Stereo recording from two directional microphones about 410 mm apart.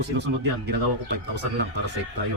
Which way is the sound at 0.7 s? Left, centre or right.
Right.